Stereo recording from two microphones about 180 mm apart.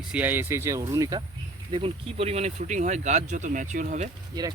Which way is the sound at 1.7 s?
30° right (ahead or behind).